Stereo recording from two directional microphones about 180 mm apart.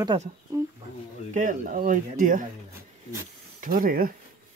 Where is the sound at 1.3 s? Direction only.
45° right (ahead or behind).